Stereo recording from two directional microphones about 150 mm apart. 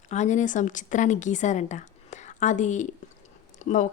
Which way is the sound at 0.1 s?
50° left (ahead or behind).